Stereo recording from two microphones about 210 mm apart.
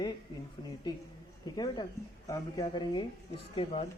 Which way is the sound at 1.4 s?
20° left (ahead or behind).